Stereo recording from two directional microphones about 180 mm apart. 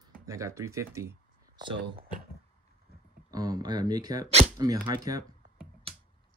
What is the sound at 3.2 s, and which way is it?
Speech, 20° right (ahead or behind).